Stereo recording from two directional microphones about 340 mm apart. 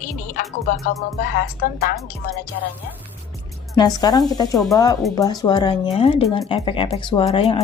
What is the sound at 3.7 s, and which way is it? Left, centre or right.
Speech, centre.